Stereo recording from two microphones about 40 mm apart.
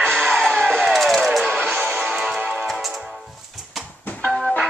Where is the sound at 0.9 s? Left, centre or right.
Centre.